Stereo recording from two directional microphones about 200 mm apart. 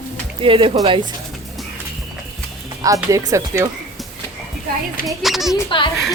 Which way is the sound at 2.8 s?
15° right (ahead or behind).